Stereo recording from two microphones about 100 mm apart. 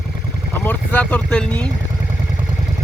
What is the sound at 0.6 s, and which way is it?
Speech, 15° left (ahead or behind).